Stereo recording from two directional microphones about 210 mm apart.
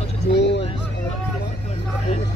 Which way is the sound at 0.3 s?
55° left (ahead or behind).